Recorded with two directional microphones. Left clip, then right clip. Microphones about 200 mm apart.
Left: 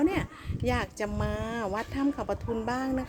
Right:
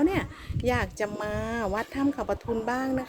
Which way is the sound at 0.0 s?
5° left (ahead or behind).